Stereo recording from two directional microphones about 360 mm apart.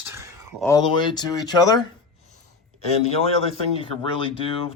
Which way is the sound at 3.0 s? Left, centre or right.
Centre.